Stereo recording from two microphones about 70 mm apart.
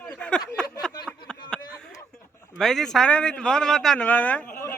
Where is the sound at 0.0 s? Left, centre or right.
Centre.